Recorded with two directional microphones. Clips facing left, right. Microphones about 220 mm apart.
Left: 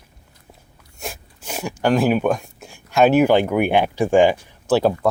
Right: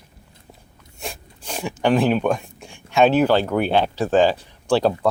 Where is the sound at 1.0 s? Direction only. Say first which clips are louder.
Left 1 dB; 5° left (ahead or behind).